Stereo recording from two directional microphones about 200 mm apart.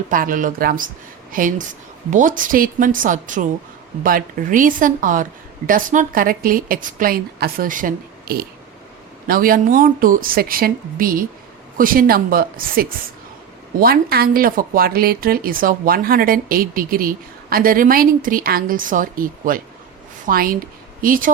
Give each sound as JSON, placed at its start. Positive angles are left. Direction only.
{"t": 0.1, "sound": "a woman's voice", "side_deg": -45}